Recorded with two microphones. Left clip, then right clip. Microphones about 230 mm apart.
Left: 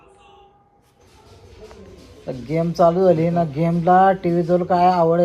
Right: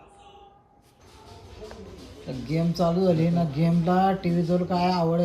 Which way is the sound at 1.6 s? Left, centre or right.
Centre.